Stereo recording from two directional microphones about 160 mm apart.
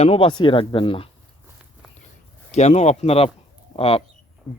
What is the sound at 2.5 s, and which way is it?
Speech, 45° left (ahead or behind).